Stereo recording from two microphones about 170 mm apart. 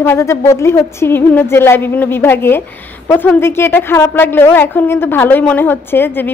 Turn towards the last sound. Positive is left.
turn(degrees=10)  # may be behind; listen again after turning